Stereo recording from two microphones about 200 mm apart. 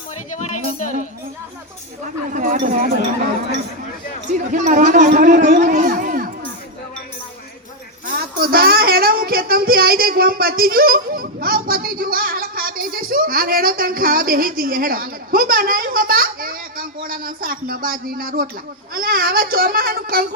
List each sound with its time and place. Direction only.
0.3 s a woman's voice: 40° left (ahead or behind)
2.3 s speech: 40° right (ahead or behind)
4.3 s speech: 40° right (ahead or behind)
8.2 s speech: 50° right (ahead or behind)